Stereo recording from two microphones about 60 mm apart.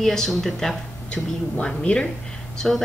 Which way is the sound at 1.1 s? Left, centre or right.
Centre.